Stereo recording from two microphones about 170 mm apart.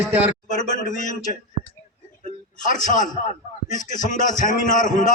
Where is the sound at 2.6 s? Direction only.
50° left (ahead or behind).